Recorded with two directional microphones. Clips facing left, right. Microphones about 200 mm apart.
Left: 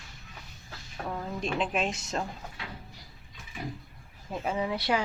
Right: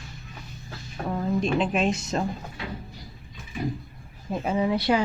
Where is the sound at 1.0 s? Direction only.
15° right (ahead or behind).